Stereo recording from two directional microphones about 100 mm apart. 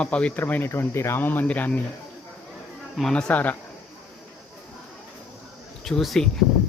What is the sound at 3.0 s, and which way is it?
Speech, 5° left (ahead or behind).